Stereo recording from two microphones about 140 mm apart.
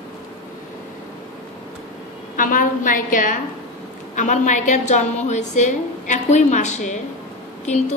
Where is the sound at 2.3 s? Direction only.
70° left (ahead or behind).